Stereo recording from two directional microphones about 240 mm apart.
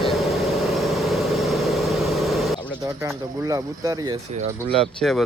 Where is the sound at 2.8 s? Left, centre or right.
Centre.